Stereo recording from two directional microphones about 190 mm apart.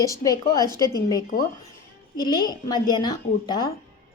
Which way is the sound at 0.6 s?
20° right (ahead or behind).